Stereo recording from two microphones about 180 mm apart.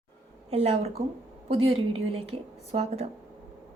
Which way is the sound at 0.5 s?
35° right (ahead or behind).